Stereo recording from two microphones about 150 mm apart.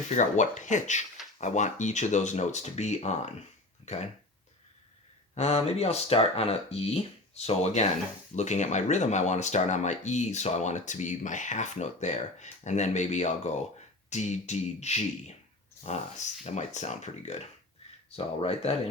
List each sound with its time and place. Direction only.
0.1 s speech: 55° left (ahead or behind)
5.3 s speech: 45° left (ahead or behind)